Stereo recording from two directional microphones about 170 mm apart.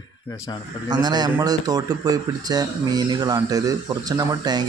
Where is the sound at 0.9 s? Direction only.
25° right (ahead or behind).